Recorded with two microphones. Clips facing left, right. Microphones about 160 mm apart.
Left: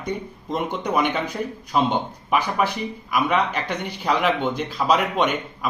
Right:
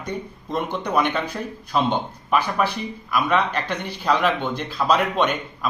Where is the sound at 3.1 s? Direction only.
15° left (ahead or behind).